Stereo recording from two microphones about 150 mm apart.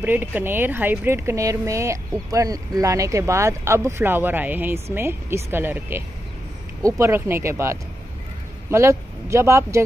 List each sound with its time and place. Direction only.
0.0 s speech: 10° right (ahead or behind)